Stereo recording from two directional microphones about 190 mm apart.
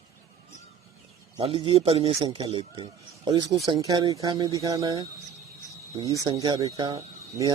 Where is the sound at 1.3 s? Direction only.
25° right (ahead or behind).